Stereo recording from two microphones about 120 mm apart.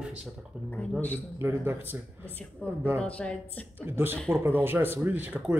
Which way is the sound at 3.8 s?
20° right (ahead or behind).